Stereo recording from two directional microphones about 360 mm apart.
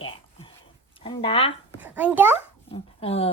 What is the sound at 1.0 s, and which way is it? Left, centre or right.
Speech, centre.